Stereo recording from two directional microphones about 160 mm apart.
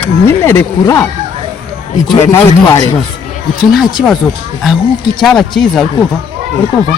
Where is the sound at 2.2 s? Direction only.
20° left (ahead or behind).